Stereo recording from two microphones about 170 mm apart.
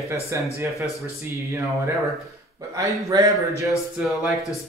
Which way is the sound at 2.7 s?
20° right (ahead or behind).